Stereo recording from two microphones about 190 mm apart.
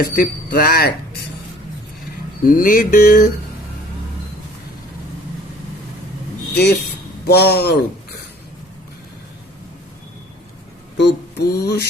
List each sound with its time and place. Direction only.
0.0 s speech: 55° left (ahead or behind)
2.4 s speech: 45° left (ahead or behind)
6.5 s speech: 60° left (ahead or behind)
10.9 s a sound: 60° left (ahead or behind)